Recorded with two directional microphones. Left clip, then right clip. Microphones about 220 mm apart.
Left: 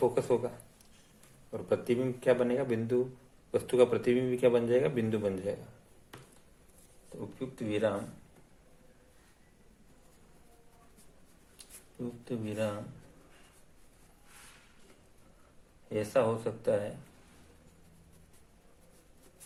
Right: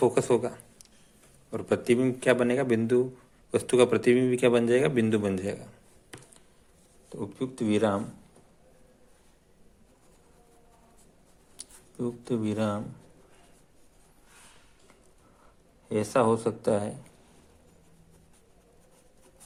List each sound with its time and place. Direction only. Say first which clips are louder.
0.0 s a man's voice: right 5 dB; 30° right (ahead or behind)
7.2 s a man's voice: right 7 dB; 40° right (ahead or behind)
12.2 s a man's voice: right 4 dB; 40° right (ahead or behind)
15.9 s a man's voice: right 5 dB; 40° right (ahead or behind)